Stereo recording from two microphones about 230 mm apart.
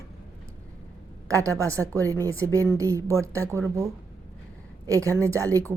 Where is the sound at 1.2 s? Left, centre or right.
Centre.